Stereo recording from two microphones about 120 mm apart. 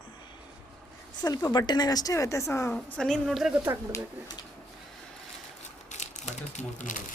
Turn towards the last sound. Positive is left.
turn(degrees=80)